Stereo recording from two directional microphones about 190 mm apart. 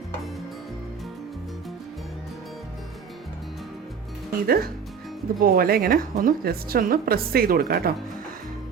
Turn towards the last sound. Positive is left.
turn(degrees=-50)  # may be behind; listen again after turning